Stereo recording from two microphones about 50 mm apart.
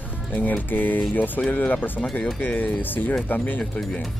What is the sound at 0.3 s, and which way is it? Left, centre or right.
Speech, left.